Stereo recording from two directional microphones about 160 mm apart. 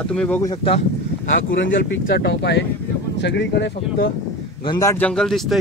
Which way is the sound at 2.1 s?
90° left.